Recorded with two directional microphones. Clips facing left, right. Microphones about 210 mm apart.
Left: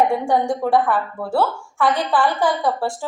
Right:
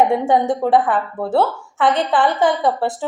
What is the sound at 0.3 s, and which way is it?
A woman's voice, 20° right (ahead or behind).